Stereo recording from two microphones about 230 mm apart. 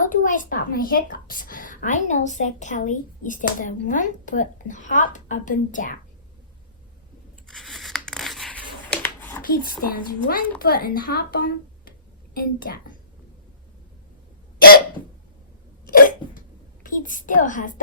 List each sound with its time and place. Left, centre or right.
0.0 s a woman's voice: left
7.4 s scissors: centre
9.4 s a woman's voice: left
15.9 s hiccup: left
16.8 s a woman's voice: left